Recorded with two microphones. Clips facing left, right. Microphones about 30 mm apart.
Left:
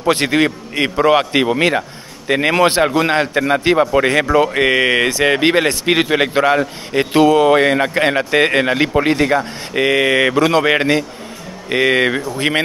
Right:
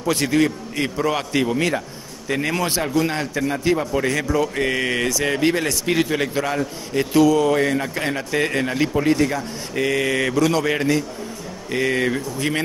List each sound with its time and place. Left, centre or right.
0.0 s a man's voice: left